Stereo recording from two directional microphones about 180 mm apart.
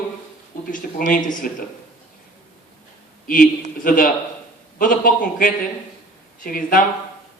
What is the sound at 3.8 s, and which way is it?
Speech, 50° left (ahead or behind).